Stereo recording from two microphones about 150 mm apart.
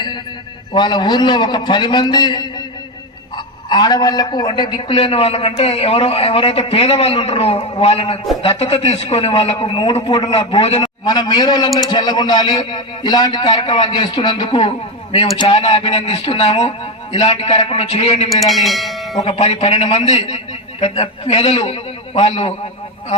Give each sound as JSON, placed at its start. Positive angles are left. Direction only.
{"t": 0.7, "sound": "a man's voice", "side_deg": 30}
{"t": 4.9, "sound": "a man's voice", "side_deg": 40}
{"t": 11.0, "sound": "a man's voice", "side_deg": 30}
{"t": 15.4, "sound": "a man's voice", "side_deg": 45}
{"t": 18.3, "sound": "speech", "side_deg": 0}
{"t": 19.2, "sound": "a man's voice", "side_deg": 45}